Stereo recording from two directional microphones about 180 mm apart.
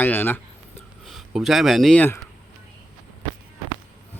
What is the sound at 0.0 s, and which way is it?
Speech, 10° left (ahead or behind).